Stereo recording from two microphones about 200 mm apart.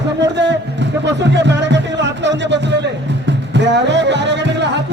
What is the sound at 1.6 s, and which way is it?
Music, 60° right (ahead or behind).